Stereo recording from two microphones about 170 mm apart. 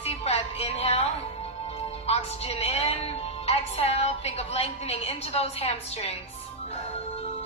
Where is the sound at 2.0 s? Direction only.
35° left (ahead or behind).